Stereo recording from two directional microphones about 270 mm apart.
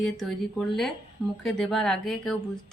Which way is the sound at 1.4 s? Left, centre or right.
Centre.